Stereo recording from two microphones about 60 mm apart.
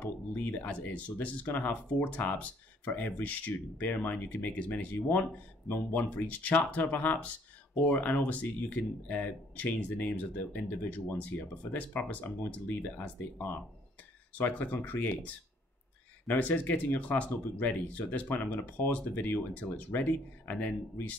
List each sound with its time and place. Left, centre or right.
0.0 s speech: left